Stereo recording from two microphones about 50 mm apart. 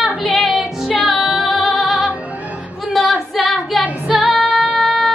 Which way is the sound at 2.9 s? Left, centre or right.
Centre.